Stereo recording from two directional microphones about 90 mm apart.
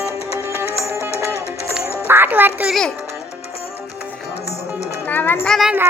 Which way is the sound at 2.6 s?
5° left (ahead or behind).